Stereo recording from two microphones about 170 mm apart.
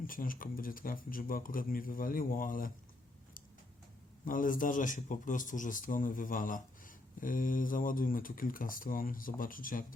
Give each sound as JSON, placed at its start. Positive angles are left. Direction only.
{"t": 0.0, "sound": "speech", "side_deg": 55}
{"t": 4.3, "sound": "speech", "side_deg": 50}